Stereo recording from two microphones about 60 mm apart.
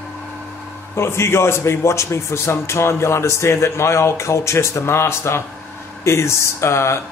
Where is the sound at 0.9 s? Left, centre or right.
Left.